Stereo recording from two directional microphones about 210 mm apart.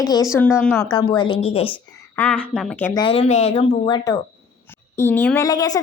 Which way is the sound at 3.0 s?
25° left (ahead or behind).